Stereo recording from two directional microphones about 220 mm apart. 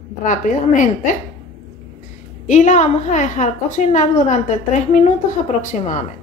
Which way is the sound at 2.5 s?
35° left (ahead or behind).